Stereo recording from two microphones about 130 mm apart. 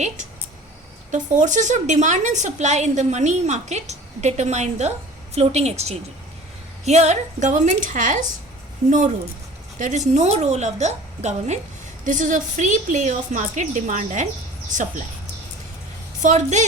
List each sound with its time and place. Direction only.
1.1 s a woman's voice: 70° right (ahead or behind)
9.7 s a woman's voice: 70° right (ahead or behind)
12.0 s a woman's voice: 75° right (ahead or behind)
16.2 s a woman's voice: 65° right (ahead or behind)